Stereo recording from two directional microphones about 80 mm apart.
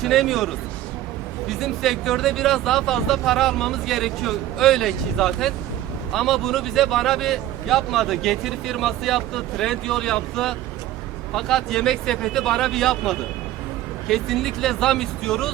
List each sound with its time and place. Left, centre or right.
0.0 s speech: centre